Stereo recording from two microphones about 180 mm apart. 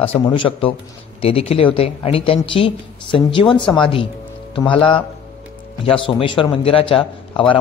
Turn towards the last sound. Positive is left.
turn(degrees=30)  # may be behind; listen again after turning